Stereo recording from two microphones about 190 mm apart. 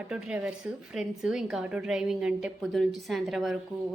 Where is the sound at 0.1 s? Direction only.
5° right (ahead or behind).